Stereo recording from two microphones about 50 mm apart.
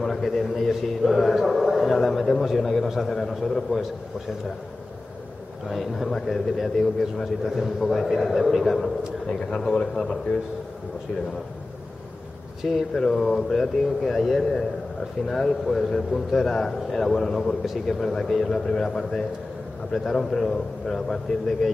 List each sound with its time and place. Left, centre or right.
0.0 s a man's voice: centre
5.7 s a man's voice: centre
9.3 s a man's voice: centre
12.9 s a man's voice: centre